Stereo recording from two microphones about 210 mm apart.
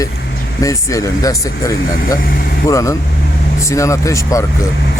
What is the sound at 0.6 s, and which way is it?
Speech, 15° left (ahead or behind).